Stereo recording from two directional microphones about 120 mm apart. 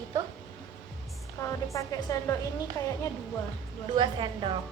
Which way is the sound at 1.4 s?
25° left (ahead or behind).